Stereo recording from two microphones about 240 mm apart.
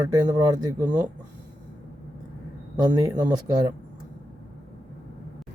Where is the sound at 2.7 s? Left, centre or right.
Centre.